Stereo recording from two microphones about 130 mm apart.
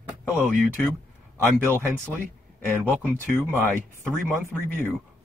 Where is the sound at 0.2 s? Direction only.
20° left (ahead or behind).